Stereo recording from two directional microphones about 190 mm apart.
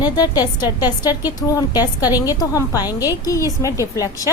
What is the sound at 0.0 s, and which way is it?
A woman's voice, 20° left (ahead or behind).